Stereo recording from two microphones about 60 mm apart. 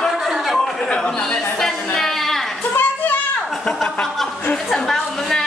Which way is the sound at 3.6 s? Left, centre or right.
Centre.